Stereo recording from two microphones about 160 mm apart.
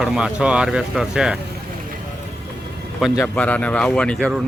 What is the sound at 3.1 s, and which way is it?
Speech, 10° left (ahead or behind).